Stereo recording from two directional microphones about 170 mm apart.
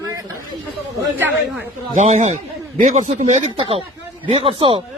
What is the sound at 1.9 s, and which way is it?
A man's voice, 45° right (ahead or behind).